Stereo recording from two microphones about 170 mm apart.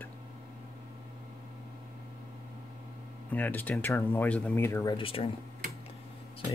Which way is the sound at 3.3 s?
10° left (ahead or behind).